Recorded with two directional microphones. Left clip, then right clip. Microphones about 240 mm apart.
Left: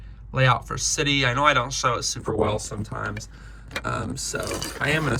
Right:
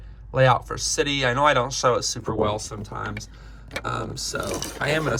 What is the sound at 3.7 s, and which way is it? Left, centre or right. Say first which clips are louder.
Speech: even; centre.